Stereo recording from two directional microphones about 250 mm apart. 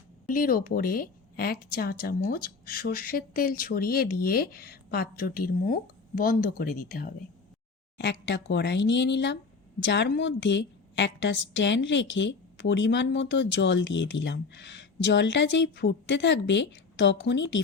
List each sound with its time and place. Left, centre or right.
0.3 s a woman's voice: left